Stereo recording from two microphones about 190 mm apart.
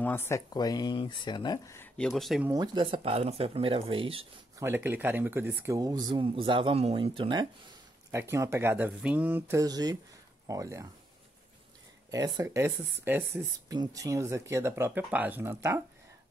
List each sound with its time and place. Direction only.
0.0 s speech: 15° left (ahead or behind)
2.0 s speech: centre (ahead or behind)
2.4 s speech: 20° right (ahead or behind)
4.6 s speech: 10° right (ahead or behind)
8.1 s speech: 15° right (ahead or behind)
12.1 s speech: 20° right (ahead or behind)